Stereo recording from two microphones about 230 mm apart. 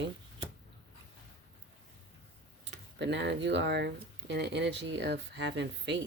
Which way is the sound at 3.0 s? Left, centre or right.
Right.